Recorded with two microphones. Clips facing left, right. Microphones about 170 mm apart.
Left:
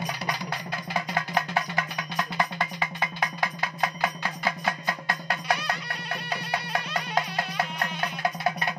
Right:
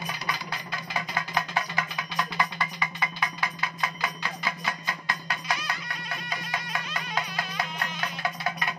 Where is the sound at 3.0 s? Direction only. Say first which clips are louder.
Left 2 dB; 45° left (ahead or behind); by 5.7 s 60° left (ahead or behind).